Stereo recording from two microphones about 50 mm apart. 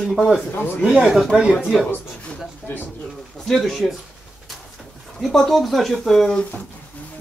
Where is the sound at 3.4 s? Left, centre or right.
Centre.